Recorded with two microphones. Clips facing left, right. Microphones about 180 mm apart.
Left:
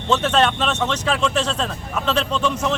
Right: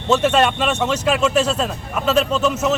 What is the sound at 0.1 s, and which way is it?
A man's voice, 10° right (ahead or behind).